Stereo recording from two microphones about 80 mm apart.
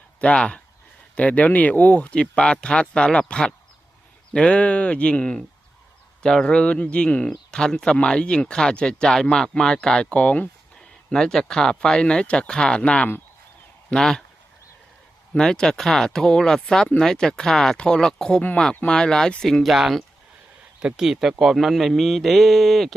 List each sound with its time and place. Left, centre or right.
0.2 s speech: centre
11.1 s speech: centre
15.4 s speech: centre